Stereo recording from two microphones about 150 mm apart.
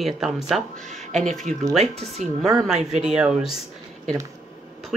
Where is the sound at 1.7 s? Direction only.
45° right (ahead or behind).